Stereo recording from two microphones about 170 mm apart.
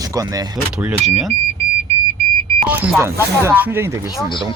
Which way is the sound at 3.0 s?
15° right (ahead or behind).